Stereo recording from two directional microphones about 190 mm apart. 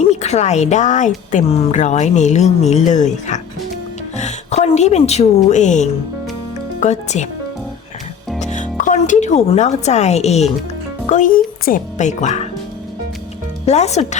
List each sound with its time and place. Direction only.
0.1 s a woman's voice: 35° left (ahead or behind)
8.4 s speech: 40° left (ahead or behind)
13.7 s speech: 35° left (ahead or behind)